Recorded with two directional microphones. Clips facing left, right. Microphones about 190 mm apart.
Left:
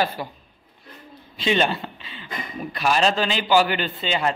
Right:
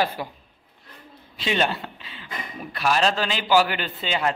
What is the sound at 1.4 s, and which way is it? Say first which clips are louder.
Speech: left 3 dB; 5° right (ahead or behind).